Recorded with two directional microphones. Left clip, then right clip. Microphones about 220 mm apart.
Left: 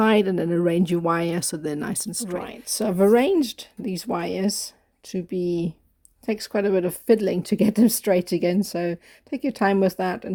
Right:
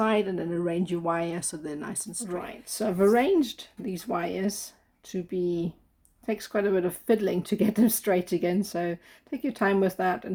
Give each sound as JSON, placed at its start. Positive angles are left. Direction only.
{"t": 0.0, "sound": "speech", "side_deg": 50}